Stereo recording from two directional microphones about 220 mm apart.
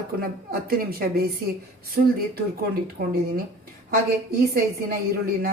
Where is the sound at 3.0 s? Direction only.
45° right (ahead or behind).